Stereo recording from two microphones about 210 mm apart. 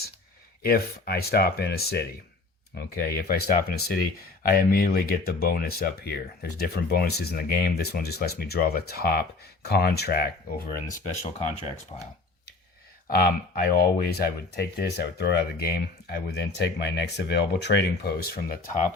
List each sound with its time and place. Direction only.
0.6 s speech: 45° left (ahead or behind)
11.2 s speech: 30° left (ahead or behind)
13.6 s speech: 50° left (ahead or behind)